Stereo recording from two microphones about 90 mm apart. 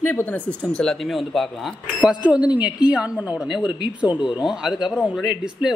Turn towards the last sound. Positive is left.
turn(degrees=-5)  # may be behind; listen again after turning